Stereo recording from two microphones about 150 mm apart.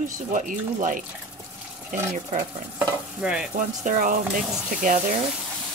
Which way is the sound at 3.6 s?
65° right (ahead or behind).